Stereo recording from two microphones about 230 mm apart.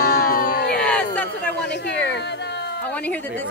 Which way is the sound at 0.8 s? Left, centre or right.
Centre.